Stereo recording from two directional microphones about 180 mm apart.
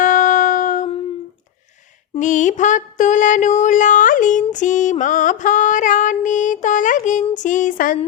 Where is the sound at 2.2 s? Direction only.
45° left (ahead or behind).